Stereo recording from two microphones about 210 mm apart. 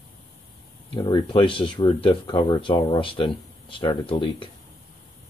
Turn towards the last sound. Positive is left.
turn(degrees=25)  # may be behind; listen again after turning